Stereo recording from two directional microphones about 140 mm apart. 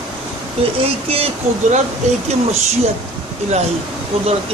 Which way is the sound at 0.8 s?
45° right (ahead or behind).